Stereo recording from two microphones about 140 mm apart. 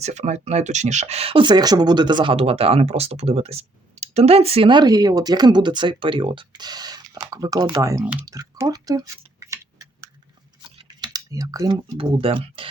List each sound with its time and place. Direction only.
0.0 s speech: 55° right (ahead or behind); by 8.0 s 20° right (ahead or behind)
8.2 s tick-tock: 25° right (ahead or behind)
10.6 s typing: 35° right (ahead or behind)
11.9 s speech: 40° right (ahead or behind)